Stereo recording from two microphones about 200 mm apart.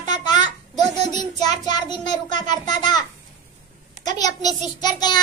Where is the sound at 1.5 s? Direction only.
20° left (ahead or behind).